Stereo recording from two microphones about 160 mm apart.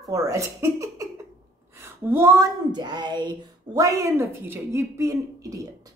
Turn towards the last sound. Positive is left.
turn(degrees=-20)  # may be behind; listen again after turning